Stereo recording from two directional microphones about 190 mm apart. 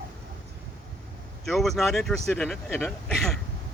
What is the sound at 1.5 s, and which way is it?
Speech, centre (ahead or behind).